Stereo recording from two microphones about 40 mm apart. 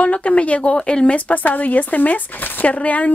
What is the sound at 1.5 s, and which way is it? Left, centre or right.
Speech, left.